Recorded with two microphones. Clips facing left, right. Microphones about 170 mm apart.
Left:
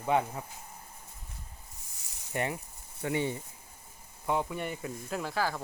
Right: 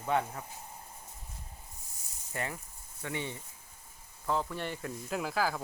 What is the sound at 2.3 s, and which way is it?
Speech, 20° left (ahead or behind).